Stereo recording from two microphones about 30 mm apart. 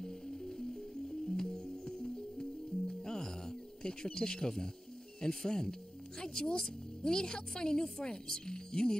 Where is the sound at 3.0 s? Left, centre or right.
Centre.